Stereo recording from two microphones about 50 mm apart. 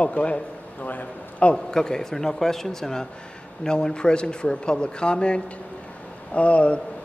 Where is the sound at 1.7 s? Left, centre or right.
Centre.